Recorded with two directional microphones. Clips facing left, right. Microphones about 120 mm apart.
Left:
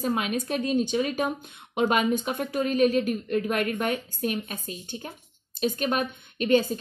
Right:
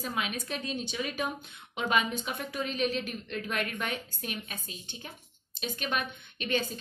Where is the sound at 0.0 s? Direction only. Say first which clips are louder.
Left 8 dB; 45° left (ahead or behind).